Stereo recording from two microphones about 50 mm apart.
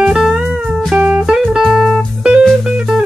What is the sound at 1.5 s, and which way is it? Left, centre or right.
Music, centre.